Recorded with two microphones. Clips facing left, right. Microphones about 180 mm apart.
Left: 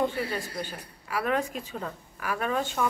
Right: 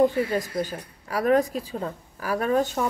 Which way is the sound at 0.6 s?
40° right (ahead or behind).